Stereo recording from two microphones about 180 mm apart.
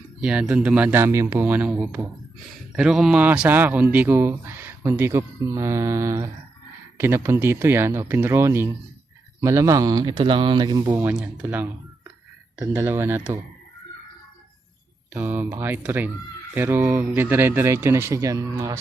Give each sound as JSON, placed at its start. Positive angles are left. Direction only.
{"t": 0.2, "sound": "a man's voice", "side_deg": -5}
{"t": 10.9, "sound": "a man's voice", "side_deg": -5}
{"t": 15.1, "sound": "a man's voice", "side_deg": -10}